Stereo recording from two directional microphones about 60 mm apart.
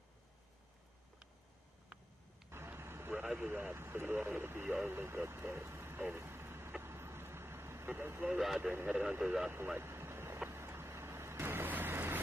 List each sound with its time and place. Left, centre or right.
2.5 s vehicle: right
3.2 s speech: right
6.1 s vehicle: right
8.2 s speech: right
9.8 s vehicle: right